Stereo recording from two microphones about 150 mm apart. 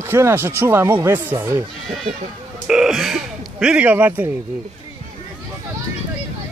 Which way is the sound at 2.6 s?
5° right (ahead or behind).